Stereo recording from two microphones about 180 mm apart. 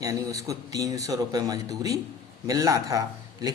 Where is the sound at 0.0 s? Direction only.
20° right (ahead or behind).